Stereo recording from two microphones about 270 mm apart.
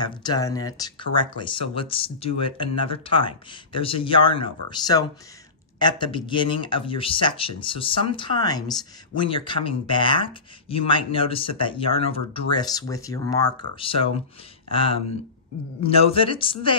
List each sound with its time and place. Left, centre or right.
0.0 s speech: centre
15.8 s speech: left